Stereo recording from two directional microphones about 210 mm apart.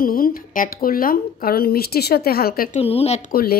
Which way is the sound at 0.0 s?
45° left (ahead or behind).